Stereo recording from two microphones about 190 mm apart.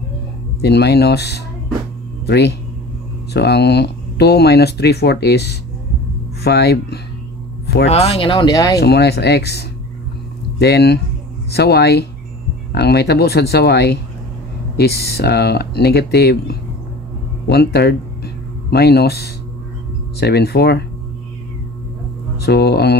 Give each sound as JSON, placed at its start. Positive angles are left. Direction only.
{"t": 0.6, "sound": "speech", "side_deg": 60}
{"t": 7.6, "sound": "a sound", "side_deg": 60}
{"t": 7.9, "sound": "speech", "side_deg": 30}
{"t": 8.7, "sound": "speech", "side_deg": 60}
{"t": 22.4, "sound": "speech", "side_deg": 60}